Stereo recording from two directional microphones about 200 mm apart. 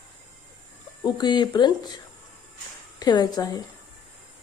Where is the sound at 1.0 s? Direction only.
20° left (ahead or behind).